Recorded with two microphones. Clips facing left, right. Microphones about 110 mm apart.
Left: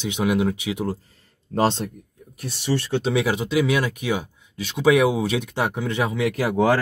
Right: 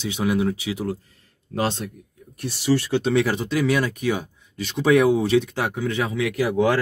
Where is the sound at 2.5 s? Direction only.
Centre (ahead or behind); by 6.2 s 20° left (ahead or behind).